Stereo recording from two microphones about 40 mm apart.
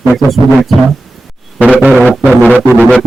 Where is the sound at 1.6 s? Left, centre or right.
Right.